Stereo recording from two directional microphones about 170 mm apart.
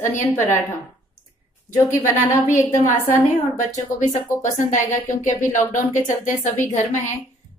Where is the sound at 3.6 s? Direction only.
45° left (ahead or behind).